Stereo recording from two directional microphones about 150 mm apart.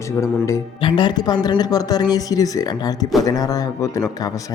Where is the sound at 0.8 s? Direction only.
35° left (ahead or behind).